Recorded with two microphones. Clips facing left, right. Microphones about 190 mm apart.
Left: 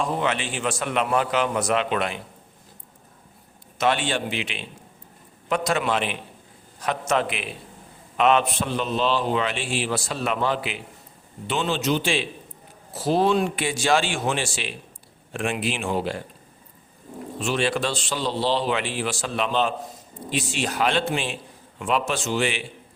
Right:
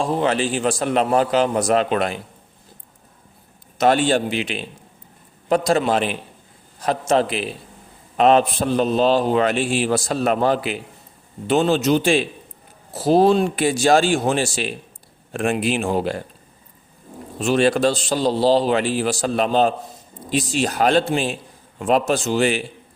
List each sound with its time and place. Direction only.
0.0 s a man's voice: 35° right (ahead or behind)
3.8 s a man's voice: 40° right (ahead or behind)
17.4 s a man's voice: 40° right (ahead or behind)